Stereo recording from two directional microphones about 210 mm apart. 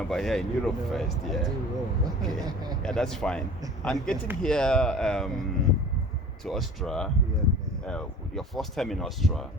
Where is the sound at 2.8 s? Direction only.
5° left (ahead or behind).